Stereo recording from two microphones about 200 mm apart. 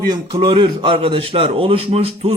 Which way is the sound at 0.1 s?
20° right (ahead or behind).